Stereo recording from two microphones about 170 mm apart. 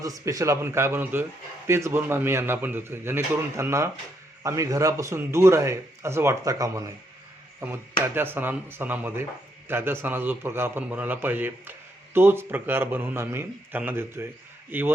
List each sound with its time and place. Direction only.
0.0 s a man's voice: 20° right (ahead or behind)